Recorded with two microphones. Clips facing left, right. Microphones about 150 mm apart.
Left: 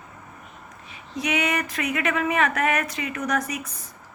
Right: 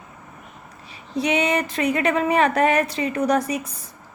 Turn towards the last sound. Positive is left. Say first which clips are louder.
# right 6 dB
turn(degrees=-30)  # may be behind; listen again after turning